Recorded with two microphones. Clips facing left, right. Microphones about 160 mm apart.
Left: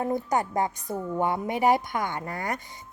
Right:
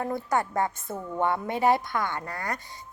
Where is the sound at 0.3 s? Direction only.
20° left (ahead or behind).